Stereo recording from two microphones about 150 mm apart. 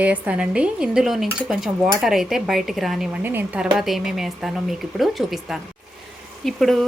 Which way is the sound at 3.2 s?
10° right (ahead or behind).